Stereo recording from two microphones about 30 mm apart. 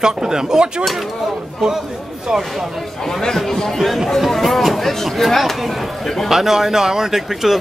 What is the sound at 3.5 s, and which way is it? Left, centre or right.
Speech, centre.